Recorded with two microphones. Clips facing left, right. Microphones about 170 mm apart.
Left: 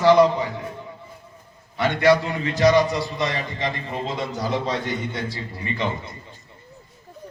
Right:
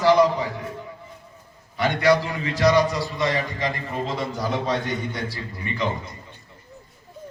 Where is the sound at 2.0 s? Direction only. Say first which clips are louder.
Left 2 dB; 25° left (ahead or behind).